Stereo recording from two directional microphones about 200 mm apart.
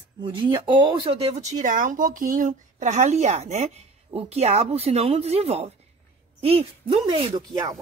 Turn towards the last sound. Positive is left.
turn(degrees=-25)  # may be behind; listen again after turning